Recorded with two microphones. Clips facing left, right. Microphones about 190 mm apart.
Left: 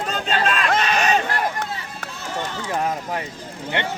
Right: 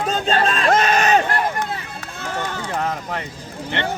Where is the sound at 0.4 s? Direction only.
35° right (ahead or behind).